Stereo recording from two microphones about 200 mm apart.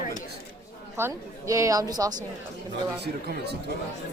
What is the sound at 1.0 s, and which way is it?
Speech, 15° right (ahead or behind).